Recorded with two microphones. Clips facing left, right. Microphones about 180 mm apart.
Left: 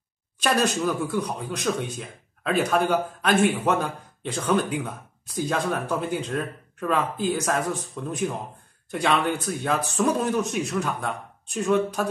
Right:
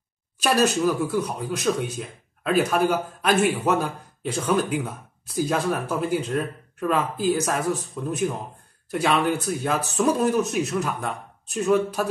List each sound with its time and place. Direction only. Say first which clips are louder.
0.4 s speech: right 2 dB; 5° right (ahead or behind)